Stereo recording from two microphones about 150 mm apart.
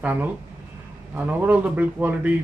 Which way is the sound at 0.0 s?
10° right (ahead or behind).